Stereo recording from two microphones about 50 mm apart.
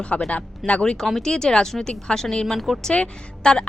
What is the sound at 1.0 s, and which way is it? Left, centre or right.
Speech, centre.